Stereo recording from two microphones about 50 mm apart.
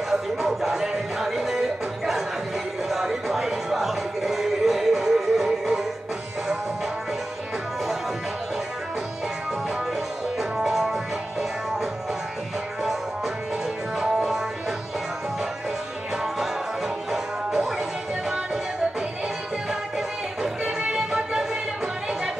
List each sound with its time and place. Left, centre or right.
0.1 s music: centre
10.6 s music: centre
13.9 s music: centre
17.1 s music: centre
20.6 s music: centre